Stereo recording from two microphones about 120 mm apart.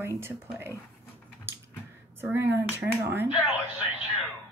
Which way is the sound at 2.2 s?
20° right (ahead or behind).